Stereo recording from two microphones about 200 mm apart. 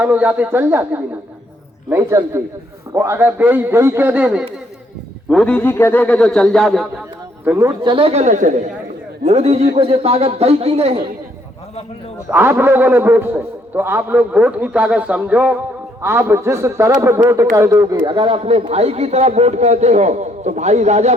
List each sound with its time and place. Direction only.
0.0 s a man's voice: 5° right (ahead or behind)
5.3 s a man's voice: 5° left (ahead or behind)
7.4 s a man's voice: 10° right (ahead or behind); by 10.9 s 30° right (ahead or behind)
12.3 s a man's voice: 10° right (ahead or behind); by 21.2 s 35° right (ahead or behind)